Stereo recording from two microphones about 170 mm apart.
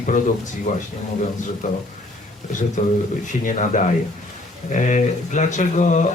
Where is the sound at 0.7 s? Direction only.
45° left (ahead or behind).